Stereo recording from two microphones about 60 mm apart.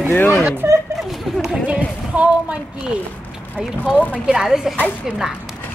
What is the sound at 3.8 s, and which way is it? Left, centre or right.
Speech, left.